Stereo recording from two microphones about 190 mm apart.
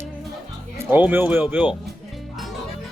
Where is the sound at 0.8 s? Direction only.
10° right (ahead or behind).